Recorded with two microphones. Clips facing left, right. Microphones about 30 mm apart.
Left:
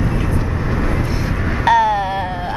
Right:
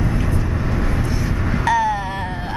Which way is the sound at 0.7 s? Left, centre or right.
Centre.